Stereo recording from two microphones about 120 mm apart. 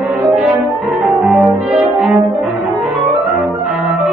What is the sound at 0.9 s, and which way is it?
Music, centre (ahead or behind).